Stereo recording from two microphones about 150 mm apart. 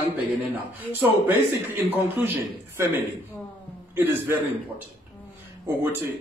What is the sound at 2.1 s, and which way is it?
Speech, 10° right (ahead or behind).